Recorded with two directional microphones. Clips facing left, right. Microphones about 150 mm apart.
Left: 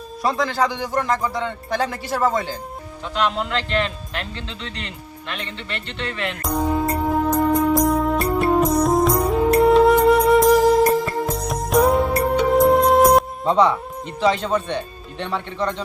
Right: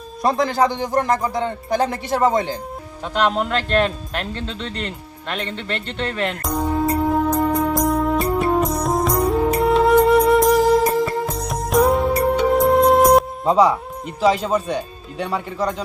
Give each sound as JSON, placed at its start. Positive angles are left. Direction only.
{"t": 0.2, "sound": "speech", "side_deg": -45}
{"t": 0.5, "sound": "speech", "side_deg": -20}
{"t": 3.2, "sound": "speech", "side_deg": -45}
{"t": 6.4, "sound": "music", "side_deg": 0}
{"t": 14.2, "sound": "speech", "side_deg": -5}